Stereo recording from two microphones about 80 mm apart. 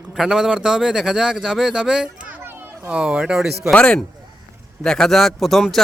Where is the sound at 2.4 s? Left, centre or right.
Right.